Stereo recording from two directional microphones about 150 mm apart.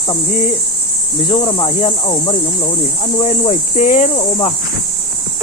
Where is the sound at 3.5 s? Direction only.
55° left (ahead or behind).